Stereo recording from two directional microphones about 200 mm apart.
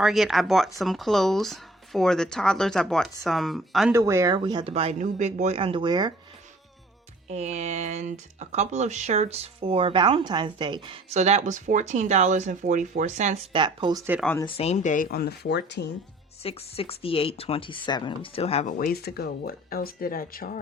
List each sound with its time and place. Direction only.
0.0 s speech: centre (ahead or behind)
3.9 s speech: 15° right (ahead or behind)
7.3 s speech: 35° right (ahead or behind)
13.5 s speech: 25° right (ahead or behind)
14.4 s speech: 30° left (ahead or behind); by 15.9 s 55° left (ahead or behind)
16.4 s speech: 30° left (ahead or behind); by 20.6 s 45° left (ahead or behind)